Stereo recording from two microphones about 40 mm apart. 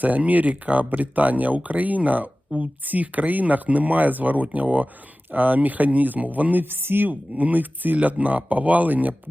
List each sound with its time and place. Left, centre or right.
0.3 s speech: right
6.8 s speech: right
7.1 s speech: right